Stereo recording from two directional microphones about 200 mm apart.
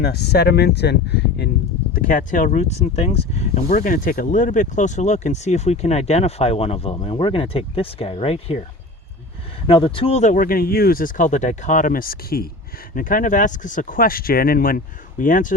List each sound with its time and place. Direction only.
0.0 s speech: 55° left (ahead or behind)
1.9 s speech: 45° left (ahead or behind)
9.6 s speech: 25° left (ahead or behind); by 15.5 s 40° left (ahead or behind)